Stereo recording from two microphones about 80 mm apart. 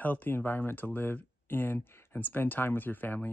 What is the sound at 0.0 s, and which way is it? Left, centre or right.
Speech, left.